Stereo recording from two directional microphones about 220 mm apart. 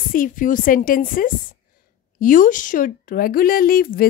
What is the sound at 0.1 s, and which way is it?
A woman's voice, 40° left (ahead or behind).